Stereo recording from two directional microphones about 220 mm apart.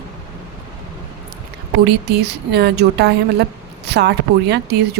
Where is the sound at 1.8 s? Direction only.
50° right (ahead or behind).